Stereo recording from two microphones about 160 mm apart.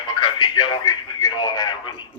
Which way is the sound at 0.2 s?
30° left (ahead or behind).